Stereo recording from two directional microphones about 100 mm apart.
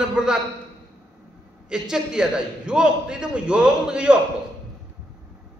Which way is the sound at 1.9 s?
5° right (ahead or behind).